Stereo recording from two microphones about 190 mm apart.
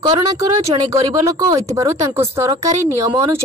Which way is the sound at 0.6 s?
35° right (ahead or behind).